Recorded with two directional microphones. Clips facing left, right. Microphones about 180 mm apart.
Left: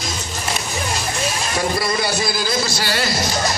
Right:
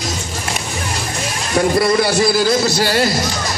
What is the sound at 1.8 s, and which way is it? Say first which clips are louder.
A man's voice: right 7 dB; 60° right (ahead or behind).